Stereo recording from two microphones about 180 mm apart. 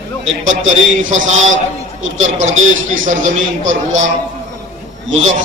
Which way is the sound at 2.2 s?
40° right (ahead or behind).